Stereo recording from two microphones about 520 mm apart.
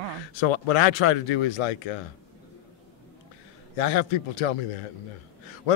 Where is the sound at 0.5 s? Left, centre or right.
Left.